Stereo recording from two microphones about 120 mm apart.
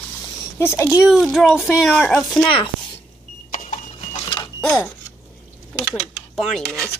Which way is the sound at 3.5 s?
90° left.